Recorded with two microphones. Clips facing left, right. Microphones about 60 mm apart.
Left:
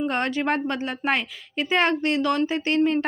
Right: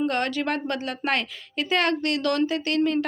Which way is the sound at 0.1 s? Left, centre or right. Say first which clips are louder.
Left 2 dB; left.